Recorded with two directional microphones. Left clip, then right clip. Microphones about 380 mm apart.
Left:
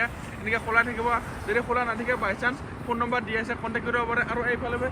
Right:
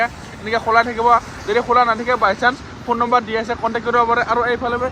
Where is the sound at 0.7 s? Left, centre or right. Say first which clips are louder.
Right 11 dB; centre.